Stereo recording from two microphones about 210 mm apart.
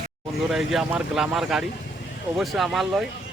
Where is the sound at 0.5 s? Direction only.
Centre (ahead or behind).